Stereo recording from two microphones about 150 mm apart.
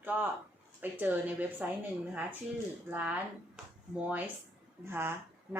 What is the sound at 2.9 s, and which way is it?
Speech, 10° right (ahead or behind).